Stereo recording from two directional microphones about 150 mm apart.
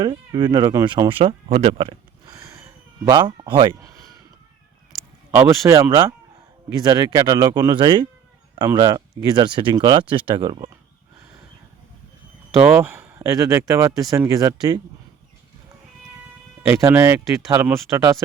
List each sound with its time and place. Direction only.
0.0 s speech: 30° right (ahead or behind)
1.0 s speech: 40° right (ahead or behind)
2.3 s a sound: 20° right (ahead or behind)
5.3 s speech: 15° right (ahead or behind)
12.7 s speech: 15° right (ahead or behind)
16.6 s speech: 15° right (ahead or behind)